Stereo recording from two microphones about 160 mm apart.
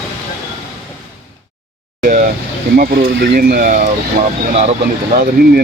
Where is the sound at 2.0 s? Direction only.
60° right (ahead or behind).